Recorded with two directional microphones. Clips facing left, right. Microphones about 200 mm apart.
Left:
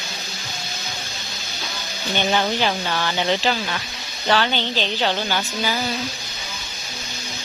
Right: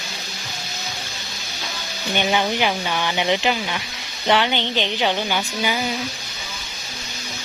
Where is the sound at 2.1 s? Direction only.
10° right (ahead or behind).